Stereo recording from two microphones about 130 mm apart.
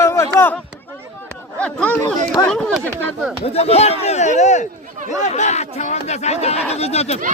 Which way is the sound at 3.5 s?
55° left (ahead or behind).